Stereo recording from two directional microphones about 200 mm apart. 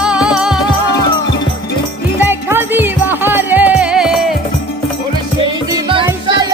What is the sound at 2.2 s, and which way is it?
Music, 10° right (ahead or behind).